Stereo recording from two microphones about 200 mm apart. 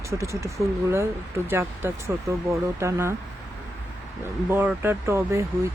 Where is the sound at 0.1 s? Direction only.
15° right (ahead or behind).